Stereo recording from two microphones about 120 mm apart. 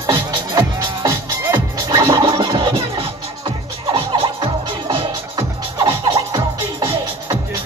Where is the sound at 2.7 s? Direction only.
50° right (ahead or behind); by 6.8 s 35° right (ahead or behind).